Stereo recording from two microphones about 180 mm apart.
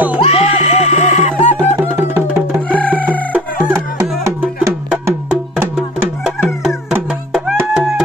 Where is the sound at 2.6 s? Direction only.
10° left (ahead or behind).